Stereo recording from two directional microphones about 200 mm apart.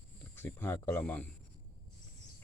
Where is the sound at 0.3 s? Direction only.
10° left (ahead or behind).